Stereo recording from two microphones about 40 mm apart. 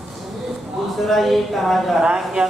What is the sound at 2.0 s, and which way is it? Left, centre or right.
Speech, centre.